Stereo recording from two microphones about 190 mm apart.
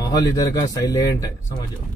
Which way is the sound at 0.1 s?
20° left (ahead or behind).